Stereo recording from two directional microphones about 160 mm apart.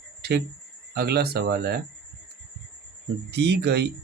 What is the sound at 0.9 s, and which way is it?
Speech, 85° right.